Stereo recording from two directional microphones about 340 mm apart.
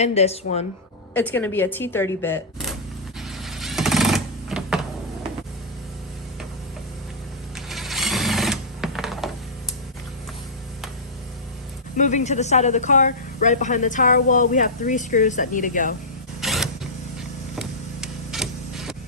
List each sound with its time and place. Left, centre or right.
0.0 s a woman's voice: centre
1.1 s speech: centre
3.2 s sewing machine: centre
7.7 s sewing machine: centre
11.9 s a woman's voice: left
16.4 s a sound: centre